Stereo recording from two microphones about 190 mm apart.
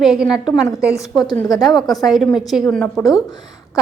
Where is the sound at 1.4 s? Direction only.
20° left (ahead or behind).